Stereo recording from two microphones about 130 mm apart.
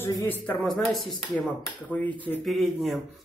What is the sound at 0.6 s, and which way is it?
Speech, centre (ahead or behind).